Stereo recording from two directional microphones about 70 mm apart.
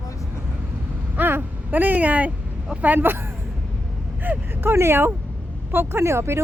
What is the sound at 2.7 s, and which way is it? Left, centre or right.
Speech, right.